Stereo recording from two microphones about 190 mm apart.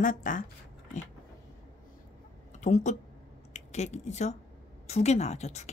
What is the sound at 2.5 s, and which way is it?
Speech, 40° left (ahead or behind).